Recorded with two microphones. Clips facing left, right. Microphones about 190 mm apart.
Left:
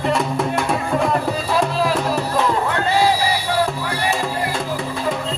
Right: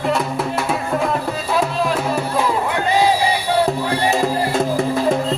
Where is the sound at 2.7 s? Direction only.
15° right (ahead or behind).